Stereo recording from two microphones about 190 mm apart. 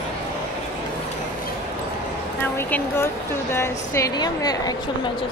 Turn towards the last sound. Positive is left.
turn(degrees=20)  # may be behind; listen again after turning